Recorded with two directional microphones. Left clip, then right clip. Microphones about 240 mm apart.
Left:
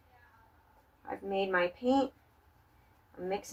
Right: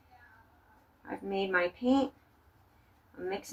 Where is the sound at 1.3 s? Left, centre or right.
Centre.